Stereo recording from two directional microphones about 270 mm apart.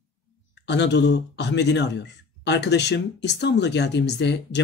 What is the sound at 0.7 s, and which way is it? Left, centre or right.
Speech, left.